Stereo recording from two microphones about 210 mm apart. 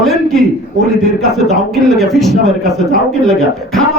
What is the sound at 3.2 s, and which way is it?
Speech, centre (ahead or behind).